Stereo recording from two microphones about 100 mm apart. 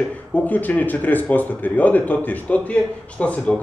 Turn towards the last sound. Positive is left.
turn(degrees=15)  # may be behind; listen again after turning